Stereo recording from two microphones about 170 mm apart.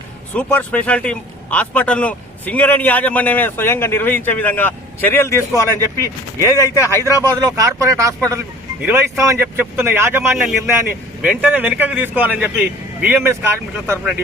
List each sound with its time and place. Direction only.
0.3 s a man's voice: 10° left (ahead or behind)
7.2 s speech: 20° right (ahead or behind); by 14.2 s 5° right (ahead or behind)